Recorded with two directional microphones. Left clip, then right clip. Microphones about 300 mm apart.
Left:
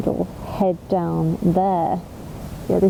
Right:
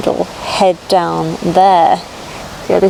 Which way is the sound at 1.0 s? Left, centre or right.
Centre.